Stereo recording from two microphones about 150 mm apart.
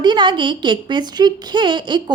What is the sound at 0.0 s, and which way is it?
A woman's voice, 30° right (ahead or behind).